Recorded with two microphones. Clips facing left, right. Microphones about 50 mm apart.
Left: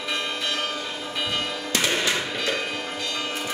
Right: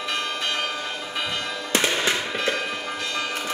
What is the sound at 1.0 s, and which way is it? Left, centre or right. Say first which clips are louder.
Change ringing: left 1 dB; centre.